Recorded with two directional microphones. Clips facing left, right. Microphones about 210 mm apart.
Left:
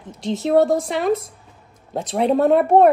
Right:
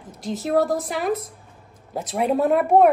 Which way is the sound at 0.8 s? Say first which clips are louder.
Left 4 dB; centre (ahead or behind).